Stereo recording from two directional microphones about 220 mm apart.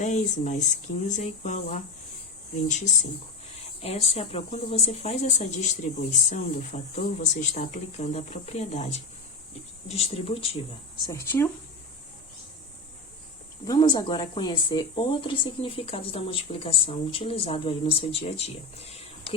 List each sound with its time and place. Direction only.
0.0 s speech: 35° left (ahead or behind)
11.1 s speech: 10° left (ahead or behind)
13.7 s speech: 20° left (ahead or behind)